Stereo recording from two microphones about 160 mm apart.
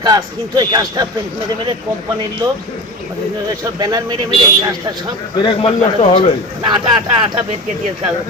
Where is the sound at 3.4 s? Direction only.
25° right (ahead or behind).